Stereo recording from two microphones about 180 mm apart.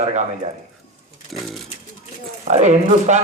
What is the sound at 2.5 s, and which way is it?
Speech, 40° right (ahead or behind).